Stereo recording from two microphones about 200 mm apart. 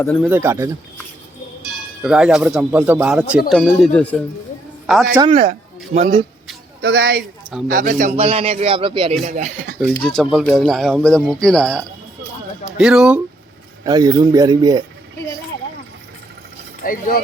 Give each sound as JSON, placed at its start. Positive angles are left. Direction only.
{"t": 0.2, "sound": "speech", "side_deg": -10}
{"t": 2.0, "sound": "speech", "side_deg": -5}
{"t": 5.1, "sound": "a man's voice", "side_deg": -25}
{"t": 6.8, "sound": "speech", "side_deg": -60}
{"t": 7.7, "sound": "a man's voice", "side_deg": -40}
{"t": 9.2, "sound": "speech", "side_deg": -35}
{"t": 10.0, "sound": "speech", "side_deg": 5}
{"t": 13.8, "sound": "a man's voice", "side_deg": -20}
{"t": 16.8, "sound": "speech", "side_deg": 45}